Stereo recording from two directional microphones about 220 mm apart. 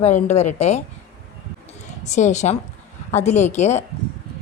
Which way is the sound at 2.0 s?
30° left (ahead or behind).